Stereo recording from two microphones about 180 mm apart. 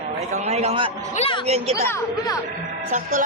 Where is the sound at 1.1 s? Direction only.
30° left (ahead or behind).